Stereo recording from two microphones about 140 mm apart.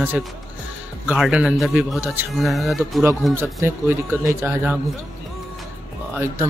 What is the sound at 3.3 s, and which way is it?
Speech, 15° right (ahead or behind).